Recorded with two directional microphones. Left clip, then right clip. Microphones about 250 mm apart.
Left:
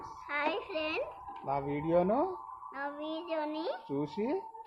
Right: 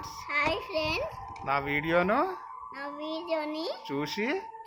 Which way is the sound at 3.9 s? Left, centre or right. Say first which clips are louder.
Right 6 dB; right.